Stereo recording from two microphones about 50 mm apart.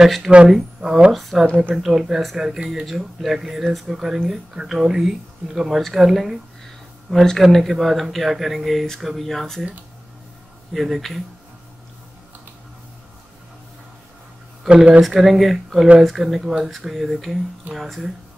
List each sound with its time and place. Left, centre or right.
0.0 s speech: centre
1.1 s speech: centre
10.7 s speech: centre
14.7 s speech: centre
15.0 s speech: centre